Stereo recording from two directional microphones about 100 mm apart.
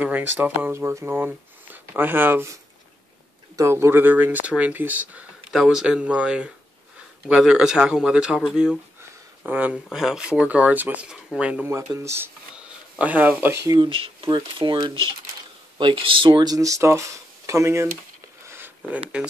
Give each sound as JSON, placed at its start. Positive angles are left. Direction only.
{"t": 0.0, "sound": "speech", "side_deg": -20}
{"t": 5.5, "sound": "speech", "side_deg": -5}
{"t": 9.5, "sound": "speech", "side_deg": -15}
{"t": 9.8, "sound": "speech", "side_deg": -5}
{"t": 11.9, "sound": "speech", "side_deg": -30}
{"t": 12.5, "sound": "speech", "side_deg": -10}
{"t": 13.7, "sound": "speech", "side_deg": -65}
{"t": 18.5, "sound": "a sound", "side_deg": -20}